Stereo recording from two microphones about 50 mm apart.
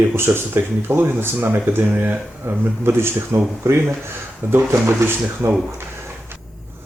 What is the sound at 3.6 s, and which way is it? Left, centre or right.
Speech, right.